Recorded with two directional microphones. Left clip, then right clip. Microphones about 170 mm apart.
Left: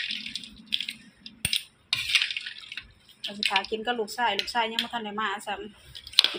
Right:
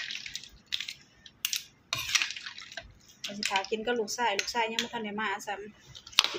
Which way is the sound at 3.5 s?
5° left (ahead or behind).